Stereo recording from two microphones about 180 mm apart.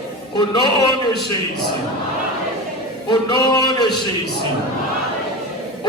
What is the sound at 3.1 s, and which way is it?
Speech, 25° left (ahead or behind).